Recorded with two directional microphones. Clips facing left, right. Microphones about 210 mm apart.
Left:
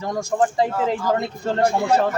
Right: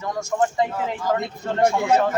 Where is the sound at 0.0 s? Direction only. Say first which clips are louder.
Left 2 dB; 35° left (ahead or behind).